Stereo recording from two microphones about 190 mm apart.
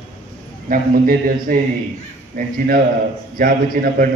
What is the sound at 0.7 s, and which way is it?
A man's voice, 50° right (ahead or behind).